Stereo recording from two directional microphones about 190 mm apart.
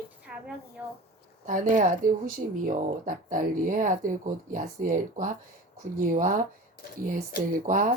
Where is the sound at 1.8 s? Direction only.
45° right (ahead or behind).